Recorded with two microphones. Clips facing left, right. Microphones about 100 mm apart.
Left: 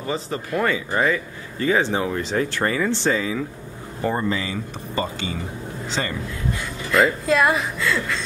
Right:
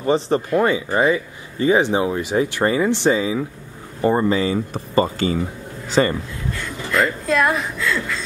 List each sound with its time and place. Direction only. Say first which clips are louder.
0.0 s speech: right 8 dB; 25° right (ahead or behind)
4.7 s speech: right 6 dB; 40° right (ahead or behind)
6.9 s speech: left 1 dB; centre (ahead or behind)